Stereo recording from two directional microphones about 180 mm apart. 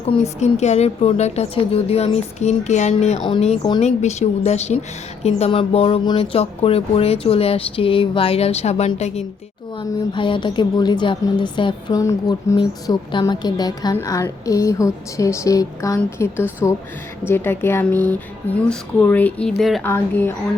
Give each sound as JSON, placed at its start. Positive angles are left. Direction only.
{"t": 0.0, "sound": "a woman's voice", "side_deg": 35}
{"t": 19.8, "sound": "speech", "side_deg": 10}